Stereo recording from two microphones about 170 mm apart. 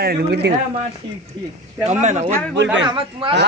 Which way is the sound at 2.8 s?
30° right (ahead or behind).